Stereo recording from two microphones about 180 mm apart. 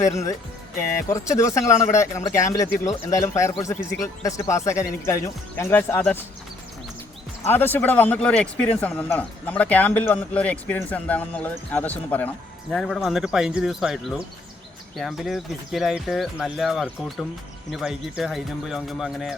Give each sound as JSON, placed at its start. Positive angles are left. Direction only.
{"t": 0.0, "sound": "a man's voice", "side_deg": 15}
{"t": 7.5, "sound": "a man's voice", "side_deg": 10}